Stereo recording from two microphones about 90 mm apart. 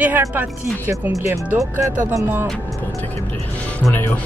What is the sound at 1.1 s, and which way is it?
Speech, 35° right (ahead or behind).